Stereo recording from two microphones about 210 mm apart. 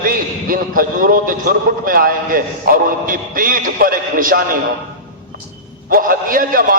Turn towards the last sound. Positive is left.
turn(degrees=-40)  # may be behind; listen again after turning